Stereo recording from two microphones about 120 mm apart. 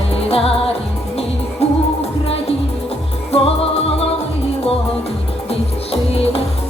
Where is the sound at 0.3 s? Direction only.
55° left (ahead or behind).